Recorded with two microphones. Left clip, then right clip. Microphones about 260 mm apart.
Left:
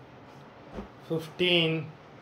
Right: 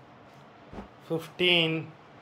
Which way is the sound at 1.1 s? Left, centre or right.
Centre.